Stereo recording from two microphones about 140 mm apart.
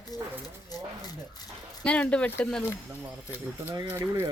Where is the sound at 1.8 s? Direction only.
10° left (ahead or behind).